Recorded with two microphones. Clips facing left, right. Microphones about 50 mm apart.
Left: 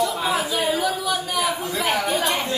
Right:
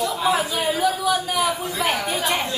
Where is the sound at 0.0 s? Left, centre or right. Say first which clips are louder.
Right 1 dB; centre.